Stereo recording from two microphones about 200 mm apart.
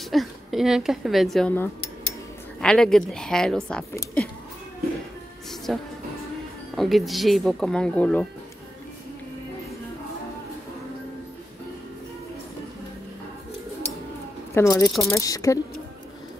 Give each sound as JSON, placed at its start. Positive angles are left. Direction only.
{"t": 0.1, "sound": "a woman's voice", "side_deg": 0}
{"t": 5.7, "sound": "speech", "side_deg": 5}
{"t": 14.5, "sound": "speech", "side_deg": 15}
{"t": 14.9, "sound": "speech", "side_deg": 0}
{"t": 15.1, "sound": "speech", "side_deg": 15}